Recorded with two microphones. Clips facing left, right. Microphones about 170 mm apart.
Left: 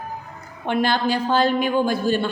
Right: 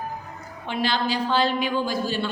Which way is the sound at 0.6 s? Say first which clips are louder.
Left 5 dB; 55° left (ahead or behind).